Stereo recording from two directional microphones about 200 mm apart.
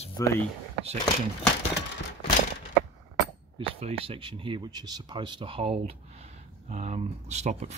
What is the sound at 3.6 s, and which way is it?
Speech, 30° right (ahead or behind).